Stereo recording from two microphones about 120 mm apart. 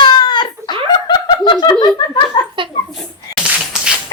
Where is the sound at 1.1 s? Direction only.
40° left (ahead or behind).